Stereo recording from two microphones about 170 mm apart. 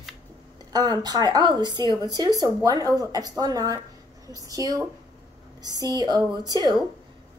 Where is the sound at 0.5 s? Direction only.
25° right (ahead or behind).